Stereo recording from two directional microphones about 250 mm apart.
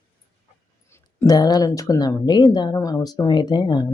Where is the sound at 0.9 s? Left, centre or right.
Centre.